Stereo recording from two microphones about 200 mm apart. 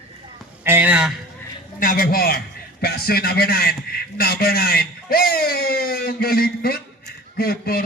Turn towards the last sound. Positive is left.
turn(degrees=50)  # may be behind; listen again after turning